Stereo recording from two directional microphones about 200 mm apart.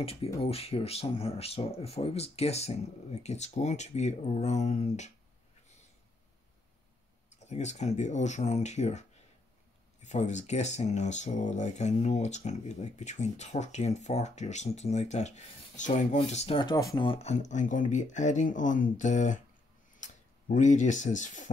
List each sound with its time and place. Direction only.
0.0 s speech: 30° left (ahead or behind)
7.4 s speech: 35° left (ahead or behind)
10.0 s speech: 35° left (ahead or behind)